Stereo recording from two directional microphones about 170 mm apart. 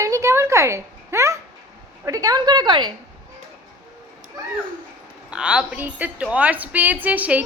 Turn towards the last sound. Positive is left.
turn(degrees=-10)  # may be behind; listen again after turning